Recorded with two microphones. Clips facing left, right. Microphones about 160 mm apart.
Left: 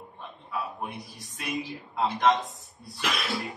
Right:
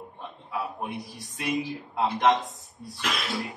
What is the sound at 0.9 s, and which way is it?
Speech, centre (ahead or behind).